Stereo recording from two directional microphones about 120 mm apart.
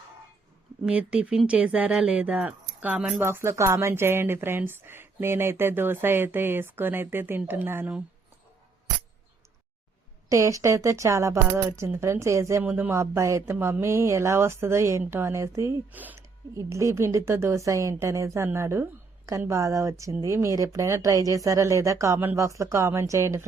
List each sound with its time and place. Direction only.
0.9 s speech: 10° right (ahead or behind)
10.2 s speech: 25° right (ahead or behind)
16.6 s speech: 25° right (ahead or behind)